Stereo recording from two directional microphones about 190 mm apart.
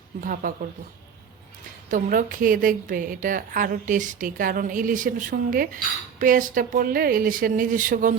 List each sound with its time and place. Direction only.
0.2 s a woman's voice: 45° right (ahead or behind)
1.9 s a woman's voice: 45° right (ahead or behind)